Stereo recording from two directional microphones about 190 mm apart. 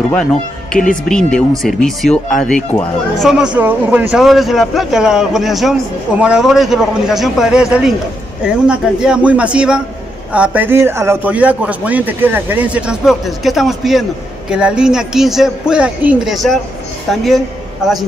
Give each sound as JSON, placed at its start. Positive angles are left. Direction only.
{"t": 0.1, "sound": "a man's voice", "side_deg": 5}